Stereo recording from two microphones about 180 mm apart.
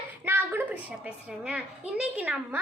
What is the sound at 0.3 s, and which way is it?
A woman's voice, 10° right (ahead or behind).